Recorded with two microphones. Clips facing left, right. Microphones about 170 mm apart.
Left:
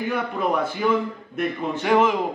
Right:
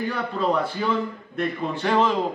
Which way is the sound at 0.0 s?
15° left (ahead or behind).